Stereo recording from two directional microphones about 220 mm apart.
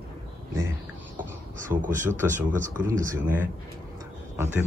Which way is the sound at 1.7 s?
15° right (ahead or behind).